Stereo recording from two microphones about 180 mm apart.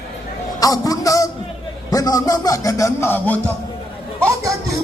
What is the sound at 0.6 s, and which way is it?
Music, 20° left (ahead or behind).